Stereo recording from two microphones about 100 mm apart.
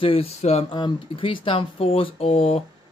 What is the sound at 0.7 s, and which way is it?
Speech, 50° left (ahead or behind).